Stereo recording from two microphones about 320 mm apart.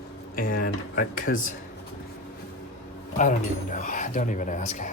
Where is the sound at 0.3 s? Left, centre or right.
Left.